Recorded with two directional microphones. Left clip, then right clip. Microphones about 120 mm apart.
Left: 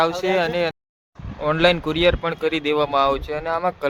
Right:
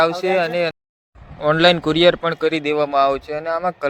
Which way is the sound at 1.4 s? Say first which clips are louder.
Right 4 dB; 45° right (ahead or behind).